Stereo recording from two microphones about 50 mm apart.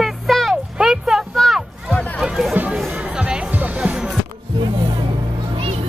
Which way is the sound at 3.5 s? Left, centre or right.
Right.